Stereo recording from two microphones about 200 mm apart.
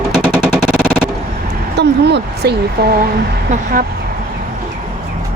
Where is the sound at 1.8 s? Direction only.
55° right (ahead or behind).